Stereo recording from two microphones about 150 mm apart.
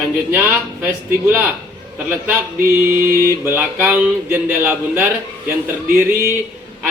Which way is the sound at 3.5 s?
10° right (ahead or behind).